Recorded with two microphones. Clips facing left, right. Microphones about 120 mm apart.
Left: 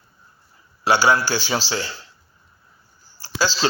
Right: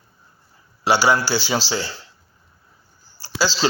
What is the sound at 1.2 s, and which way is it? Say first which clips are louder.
Speech: right 1 dB; 35° right (ahead or behind).